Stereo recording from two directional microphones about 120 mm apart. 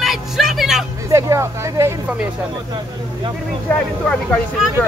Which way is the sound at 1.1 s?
25° right (ahead or behind).